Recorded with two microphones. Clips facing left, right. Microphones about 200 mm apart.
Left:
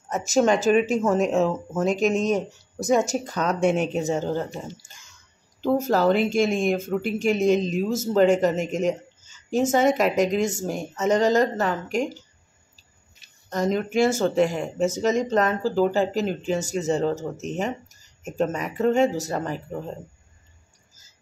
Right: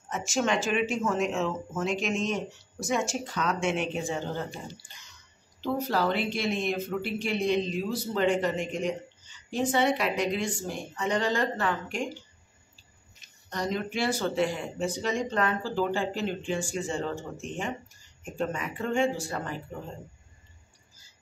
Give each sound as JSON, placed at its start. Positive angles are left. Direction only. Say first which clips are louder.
{"t": 0.1, "sound": "speech", "louder": "left 8 dB", "side_deg": 40}
{"t": 13.5, "sound": "speech", "louder": "left 7 dB", "side_deg": 45}